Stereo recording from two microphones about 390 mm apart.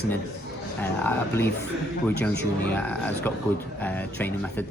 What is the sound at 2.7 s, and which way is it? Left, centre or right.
Speech, centre.